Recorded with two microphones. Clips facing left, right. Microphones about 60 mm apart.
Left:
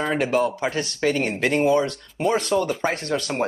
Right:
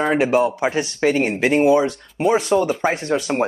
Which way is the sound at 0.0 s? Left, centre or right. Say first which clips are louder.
Right 4 dB; centre.